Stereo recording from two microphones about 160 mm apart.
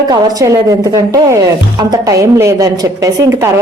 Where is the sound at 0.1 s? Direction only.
20° right (ahead or behind).